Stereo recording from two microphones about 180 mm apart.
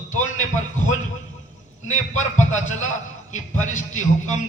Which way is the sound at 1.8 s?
40° left (ahead or behind).